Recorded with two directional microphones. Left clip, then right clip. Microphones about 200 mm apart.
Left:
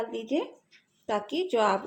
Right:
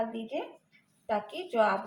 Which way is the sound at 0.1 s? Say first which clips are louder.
Left 6 dB; 55° left (ahead or behind).